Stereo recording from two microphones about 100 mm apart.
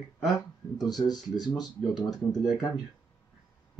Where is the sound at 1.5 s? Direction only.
45° left (ahead or behind).